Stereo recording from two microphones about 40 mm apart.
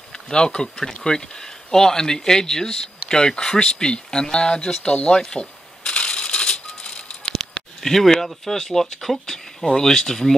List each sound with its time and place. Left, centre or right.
0.1 s a sound: centre
0.6 s speech: centre; by 7.3 s left
7.3 s speech: centre